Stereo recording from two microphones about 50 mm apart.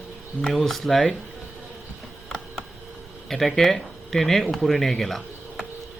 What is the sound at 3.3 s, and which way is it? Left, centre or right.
Speech, centre.